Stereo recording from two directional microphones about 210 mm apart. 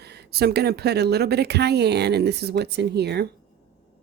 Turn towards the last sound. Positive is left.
turn(degrees=-50)  # may be behind; listen again after turning